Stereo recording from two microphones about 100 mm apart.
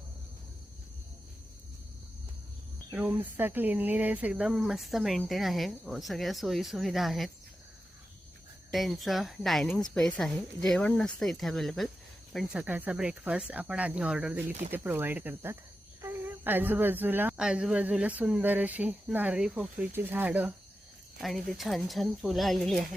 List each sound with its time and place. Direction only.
2.9 s speech: 20° right (ahead or behind); by 7.3 s centre (ahead or behind)
8.7 s speech: centre (ahead or behind)
12.5 s speech: 10° right (ahead or behind)
14.7 s speech: 20° right (ahead or behind)
17.3 s speech: 10° right (ahead or behind)
19.9 s speech: 20° right (ahead or behind)
21.2 s speech: centre (ahead or behind)